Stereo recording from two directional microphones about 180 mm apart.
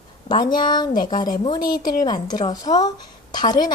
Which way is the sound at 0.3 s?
25° left (ahead or behind).